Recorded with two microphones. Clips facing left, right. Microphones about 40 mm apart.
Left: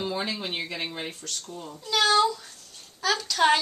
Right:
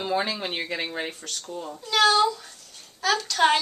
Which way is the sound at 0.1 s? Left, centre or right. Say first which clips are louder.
Right 4 dB; right.